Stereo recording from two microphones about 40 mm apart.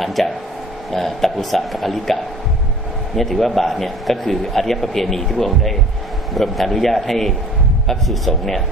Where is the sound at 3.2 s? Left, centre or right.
Centre.